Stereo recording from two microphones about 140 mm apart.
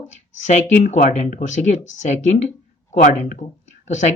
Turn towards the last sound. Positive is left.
turn(degrees=60)  # may be behind; listen again after turning